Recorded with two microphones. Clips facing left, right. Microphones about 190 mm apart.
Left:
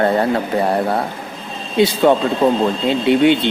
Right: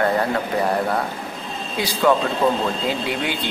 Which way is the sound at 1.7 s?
25° left (ahead or behind).